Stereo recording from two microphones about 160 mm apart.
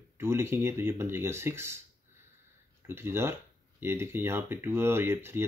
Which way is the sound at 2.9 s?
15° right (ahead or behind).